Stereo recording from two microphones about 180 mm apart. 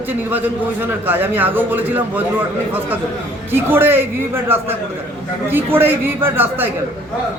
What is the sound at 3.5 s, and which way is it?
A man's voice, 10° right (ahead or behind).